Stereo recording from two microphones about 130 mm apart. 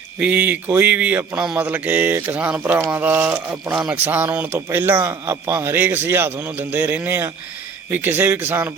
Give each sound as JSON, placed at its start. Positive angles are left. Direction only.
{"t": 0.2, "sound": "speech", "side_deg": -15}